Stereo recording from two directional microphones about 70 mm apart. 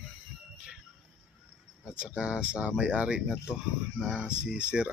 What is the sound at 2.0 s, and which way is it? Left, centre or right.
Speech, centre.